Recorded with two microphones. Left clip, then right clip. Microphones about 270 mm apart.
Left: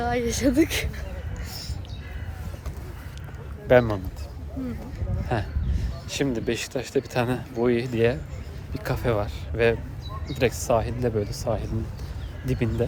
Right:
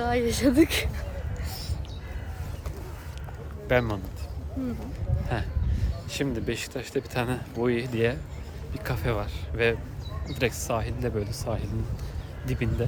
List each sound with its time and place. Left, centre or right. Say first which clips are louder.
0.0 s speech: even; centre
1.5 s a sound: left 3 dB; centre
3.7 s speech: left 7 dB; centre
5.3 s speech: left 5 dB; centre